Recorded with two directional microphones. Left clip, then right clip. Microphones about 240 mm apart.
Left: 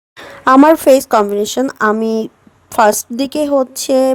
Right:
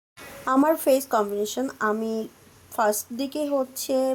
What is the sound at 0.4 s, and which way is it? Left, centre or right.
Speech, left.